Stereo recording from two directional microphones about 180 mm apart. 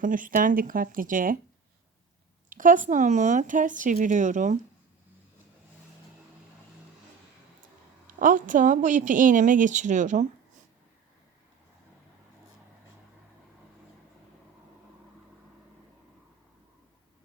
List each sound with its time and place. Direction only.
0.0 s a woman's voice: 50° right (ahead or behind)
2.5 s a woman's voice: 45° right (ahead or behind)
8.0 s a woman's voice: 50° right (ahead or behind)